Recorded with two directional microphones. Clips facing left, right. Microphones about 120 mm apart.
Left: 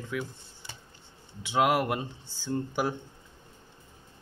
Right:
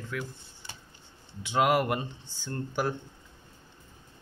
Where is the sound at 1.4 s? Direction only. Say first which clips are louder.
Even; 5° left (ahead or behind).